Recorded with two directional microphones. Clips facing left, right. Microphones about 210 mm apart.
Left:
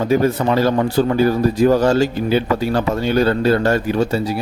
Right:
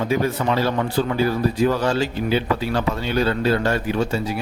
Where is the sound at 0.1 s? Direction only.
45° left (ahead or behind).